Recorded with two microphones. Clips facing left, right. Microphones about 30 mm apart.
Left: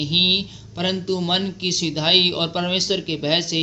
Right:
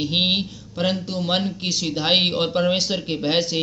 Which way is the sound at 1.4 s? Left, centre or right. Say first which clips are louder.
Left 1 dB; left.